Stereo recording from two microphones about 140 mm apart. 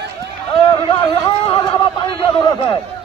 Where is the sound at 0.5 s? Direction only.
35° left (ahead or behind).